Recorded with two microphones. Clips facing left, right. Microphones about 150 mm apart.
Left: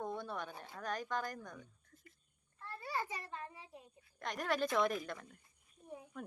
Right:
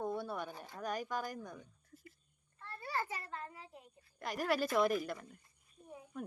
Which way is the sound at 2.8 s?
15° left (ahead or behind).